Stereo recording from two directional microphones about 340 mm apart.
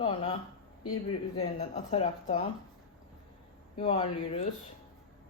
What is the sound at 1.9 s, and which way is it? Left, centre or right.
Speech, centre.